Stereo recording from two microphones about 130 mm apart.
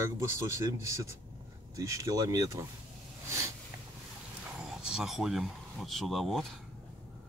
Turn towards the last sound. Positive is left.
turn(degrees=0)  # may be behind; listen again after turning